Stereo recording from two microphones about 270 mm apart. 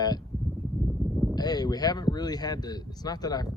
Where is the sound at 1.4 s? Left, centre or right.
Centre.